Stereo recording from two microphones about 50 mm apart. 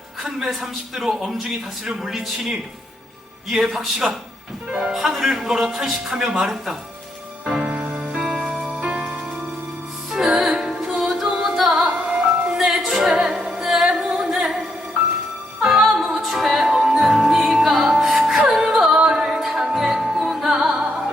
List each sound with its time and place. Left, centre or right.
0.2 s a man's voice: centre
7.6 s music: right
8.1 s music: centre
8.4 s music: centre
15.6 s music: centre
18.9 s music: centre